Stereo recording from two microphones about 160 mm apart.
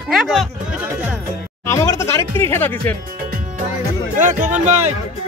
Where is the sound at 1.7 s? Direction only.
15° left (ahead or behind).